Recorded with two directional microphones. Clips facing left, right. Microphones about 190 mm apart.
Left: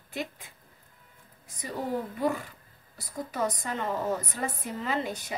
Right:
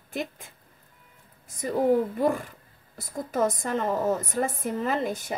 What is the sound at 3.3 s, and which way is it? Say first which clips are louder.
Speech: right 6 dB; 45° right (ahead or behind).